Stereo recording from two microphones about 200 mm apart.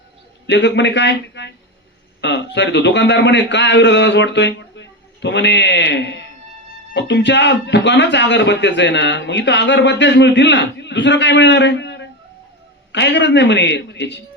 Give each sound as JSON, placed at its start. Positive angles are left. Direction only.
{"t": 0.4, "sound": "speech", "side_deg": 60}